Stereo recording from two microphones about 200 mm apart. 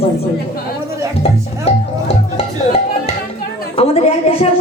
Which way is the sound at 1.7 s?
30° left (ahead or behind).